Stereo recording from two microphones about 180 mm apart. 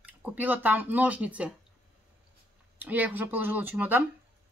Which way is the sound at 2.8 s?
10° right (ahead or behind).